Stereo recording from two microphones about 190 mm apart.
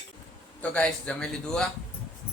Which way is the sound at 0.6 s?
5° left (ahead or behind).